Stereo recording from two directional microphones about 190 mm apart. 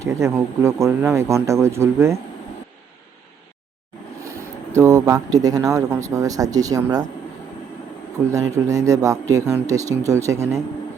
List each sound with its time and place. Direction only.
0.0 s speech: 15° right (ahead or behind)
4.8 s speech: 15° right (ahead or behind)
8.3 s speech: 15° right (ahead or behind)